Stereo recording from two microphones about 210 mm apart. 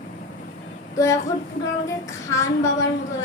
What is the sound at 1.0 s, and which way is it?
A child's voice, 15° left (ahead or behind).